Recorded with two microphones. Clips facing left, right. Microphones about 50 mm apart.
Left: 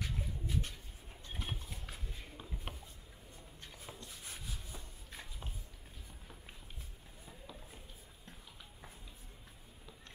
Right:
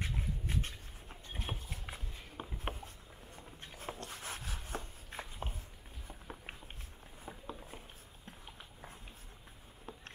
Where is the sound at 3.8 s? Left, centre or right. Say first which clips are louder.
Right 8 dB; right.